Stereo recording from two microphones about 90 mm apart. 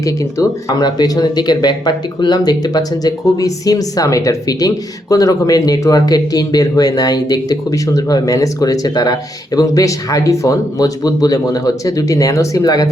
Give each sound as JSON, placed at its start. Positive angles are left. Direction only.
{"t": 0.0, "sound": "speech", "side_deg": 40}